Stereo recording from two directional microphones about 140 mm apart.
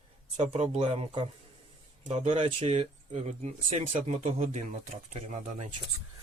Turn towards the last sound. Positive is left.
turn(degrees=-55)  # may be behind; listen again after turning